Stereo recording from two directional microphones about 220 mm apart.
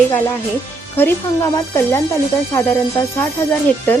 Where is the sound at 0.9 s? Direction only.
10° left (ahead or behind).